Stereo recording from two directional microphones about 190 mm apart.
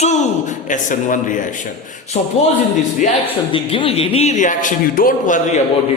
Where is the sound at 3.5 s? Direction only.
30° left (ahead or behind); by 5.6 s 45° left (ahead or behind).